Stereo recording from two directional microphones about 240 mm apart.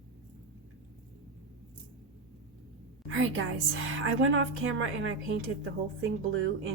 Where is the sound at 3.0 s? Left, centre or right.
Right.